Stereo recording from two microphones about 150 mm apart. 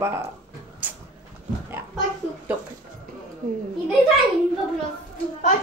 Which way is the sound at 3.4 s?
65° right (ahead or behind).